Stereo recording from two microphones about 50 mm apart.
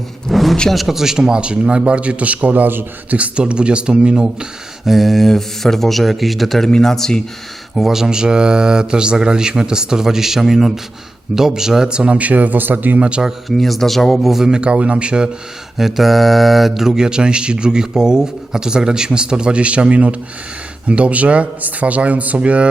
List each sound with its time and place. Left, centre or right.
0.3 s a sound: centre
0.7 s a man's voice: centre; by 2.8 s right
3.1 s a man's voice: right
4.9 s speech: centre
6.7 s speech: centre
7.8 s a man's voice: centre; by 13.0 s right
13.0 s a man's voice: right
13.6 s speech: centre
14.5 s a man's voice: right
15.8 s a man's voice: centre; by 22.7 s right